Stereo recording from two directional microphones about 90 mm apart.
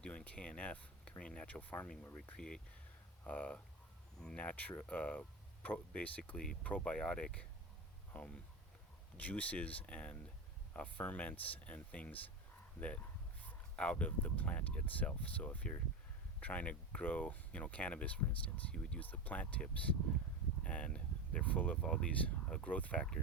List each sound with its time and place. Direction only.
0.0 s speech: 15° left (ahead or behind)
13.4 s speech: 15° left (ahead or behind)